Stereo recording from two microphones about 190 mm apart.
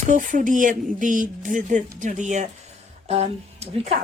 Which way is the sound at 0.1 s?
40° right (ahead or behind).